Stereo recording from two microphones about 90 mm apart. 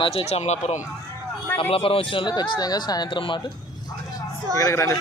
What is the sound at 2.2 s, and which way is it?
Speech, 55° left (ahead or behind).